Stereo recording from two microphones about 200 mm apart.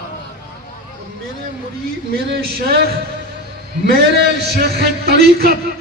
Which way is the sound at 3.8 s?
55° right (ahead or behind).